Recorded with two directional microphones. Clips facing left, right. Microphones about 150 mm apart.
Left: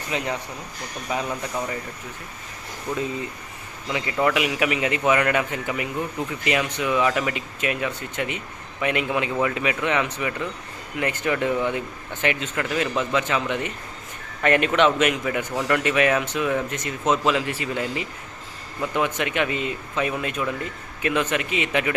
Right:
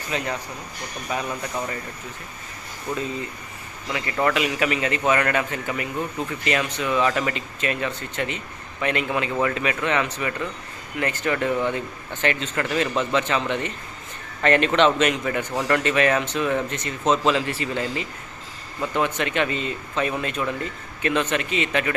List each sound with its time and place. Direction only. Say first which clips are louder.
0.1 s speech: even; 15° left (ahead or behind)
3.9 s speech: left 1 dB; 10° left (ahead or behind)